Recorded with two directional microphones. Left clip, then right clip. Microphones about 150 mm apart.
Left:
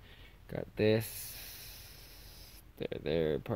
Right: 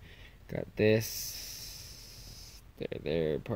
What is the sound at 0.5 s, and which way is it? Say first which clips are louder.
Speech: right 3 dB; centre (ahead or behind).